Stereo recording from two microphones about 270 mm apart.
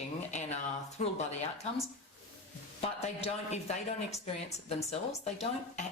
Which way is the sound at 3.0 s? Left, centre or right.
Left.